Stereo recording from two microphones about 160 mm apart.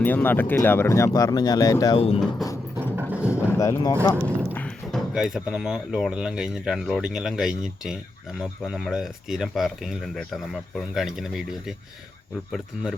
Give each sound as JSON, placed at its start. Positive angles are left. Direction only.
{"t": 0.0, "sound": "speech", "side_deg": 10}
{"t": 2.0, "sound": "speech", "side_deg": 35}
{"t": 2.7, "sound": "a sound", "side_deg": -10}
{"t": 3.6, "sound": "speech", "side_deg": 20}
{"t": 4.2, "sound": "a sound", "side_deg": -15}
{"t": 4.5, "sound": "speech", "side_deg": 5}